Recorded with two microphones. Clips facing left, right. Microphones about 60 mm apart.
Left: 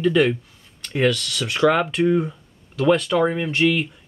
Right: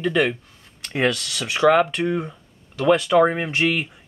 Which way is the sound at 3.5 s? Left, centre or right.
Centre.